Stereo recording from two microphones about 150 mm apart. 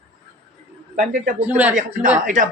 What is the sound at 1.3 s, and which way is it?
Speech, 10° right (ahead or behind).